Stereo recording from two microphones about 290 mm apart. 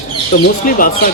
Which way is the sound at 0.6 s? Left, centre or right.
Left.